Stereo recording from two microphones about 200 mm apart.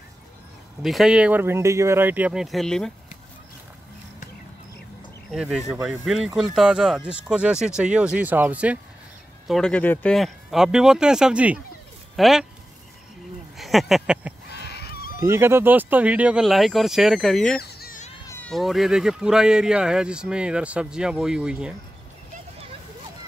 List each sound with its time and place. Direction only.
0.8 s speech: centre (ahead or behind)
5.3 s speech: centre (ahead or behind)
9.5 s speech: 5° left (ahead or behind)
13.6 s speech: centre (ahead or behind)
14.5 s a sound: 55° left (ahead or behind)
15.2 s speech: 10° right (ahead or behind)
17.6 s a sound: 50° left (ahead or behind)
18.3 s speech: 5° left (ahead or behind)